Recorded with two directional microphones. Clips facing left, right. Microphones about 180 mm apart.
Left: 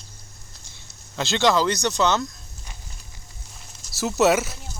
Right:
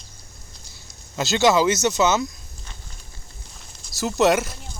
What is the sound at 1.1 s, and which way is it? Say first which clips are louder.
Speech: right 2 dB; 5° right (ahead or behind).